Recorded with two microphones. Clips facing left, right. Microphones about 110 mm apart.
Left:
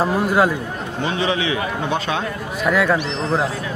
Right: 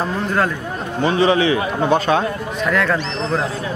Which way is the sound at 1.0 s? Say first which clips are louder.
Right 6 dB; 40° right (ahead or behind).